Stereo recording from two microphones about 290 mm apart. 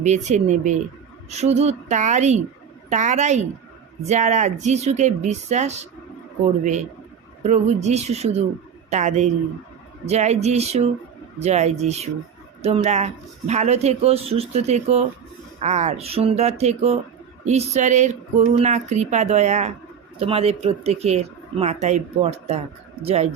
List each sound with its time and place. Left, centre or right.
0.0 s speech: right
7.4 s speech: right